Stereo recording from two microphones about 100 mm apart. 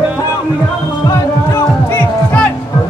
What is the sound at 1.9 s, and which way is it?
Music, 15° left (ahead or behind).